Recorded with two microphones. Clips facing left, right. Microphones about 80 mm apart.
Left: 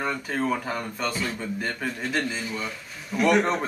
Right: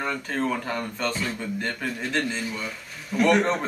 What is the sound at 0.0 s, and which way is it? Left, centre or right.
Speech, centre.